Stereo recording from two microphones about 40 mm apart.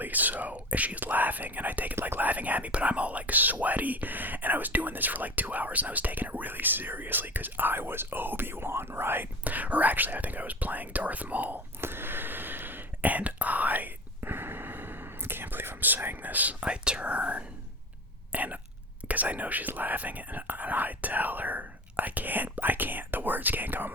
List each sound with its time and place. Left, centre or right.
0.0 s speech: right
9.4 s speech: right
11.8 s a sound: right
14.2 s whispering: right
16.6 s speech: right